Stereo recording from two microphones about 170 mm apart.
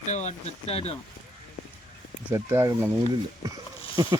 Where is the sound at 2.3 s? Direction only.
15° right (ahead or behind).